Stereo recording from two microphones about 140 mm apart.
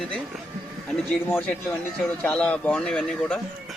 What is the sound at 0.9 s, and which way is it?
Speech, 10° left (ahead or behind).